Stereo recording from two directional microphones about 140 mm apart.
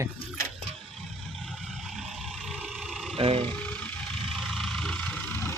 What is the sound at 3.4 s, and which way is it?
Vehicle, 10° left (ahead or behind).